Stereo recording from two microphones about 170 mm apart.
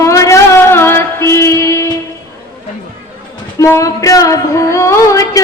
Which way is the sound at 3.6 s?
20° left (ahead or behind).